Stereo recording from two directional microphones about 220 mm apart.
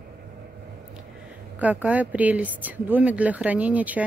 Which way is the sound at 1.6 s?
5° right (ahead or behind).